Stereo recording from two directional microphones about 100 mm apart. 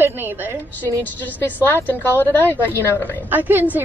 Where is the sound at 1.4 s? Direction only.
20° left (ahead or behind).